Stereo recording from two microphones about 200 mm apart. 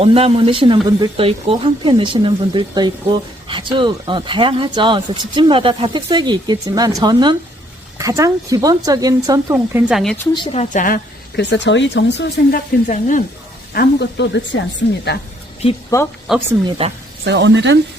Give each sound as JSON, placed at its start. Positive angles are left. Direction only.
{"t": 0.0, "sound": "speech", "side_deg": -30}
{"t": 9.9, "sound": "speech", "side_deg": 0}
{"t": 10.3, "sound": "speech", "side_deg": 25}
{"t": 11.3, "sound": "speech", "side_deg": 60}
{"t": 12.9, "sound": "speech", "side_deg": 40}
{"t": 13.7, "sound": "speech", "side_deg": 60}
{"t": 15.9, "sound": "speech", "side_deg": 15}
{"t": 16.3, "sound": "speech", "side_deg": 0}
{"t": 16.8, "sound": "speech", "side_deg": -30}
{"t": 17.2, "sound": "speech", "side_deg": -60}